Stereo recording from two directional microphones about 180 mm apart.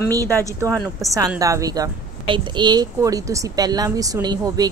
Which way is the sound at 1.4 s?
20° right (ahead or behind).